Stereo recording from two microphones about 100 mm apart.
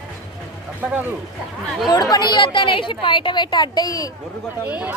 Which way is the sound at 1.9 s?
45° left (ahead or behind).